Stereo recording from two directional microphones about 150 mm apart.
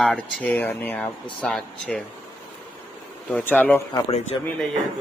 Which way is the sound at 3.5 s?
10° left (ahead or behind).